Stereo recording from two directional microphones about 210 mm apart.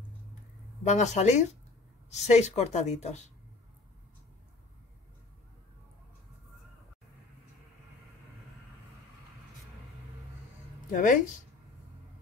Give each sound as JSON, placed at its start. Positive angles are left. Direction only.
{"t": 0.8, "sound": "a woman's voice", "side_deg": 35}
{"t": 10.9, "sound": "speech", "side_deg": 40}